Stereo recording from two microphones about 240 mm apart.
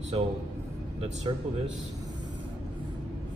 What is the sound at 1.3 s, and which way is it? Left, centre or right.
Speech, right.